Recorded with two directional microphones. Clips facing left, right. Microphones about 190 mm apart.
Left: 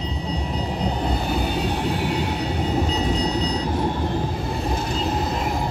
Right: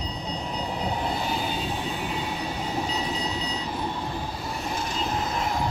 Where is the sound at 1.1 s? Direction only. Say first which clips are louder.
Left 5 dB; 55° left (ahead or behind).